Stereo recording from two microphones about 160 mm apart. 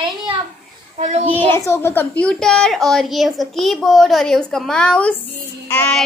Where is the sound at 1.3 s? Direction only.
15° left (ahead or behind).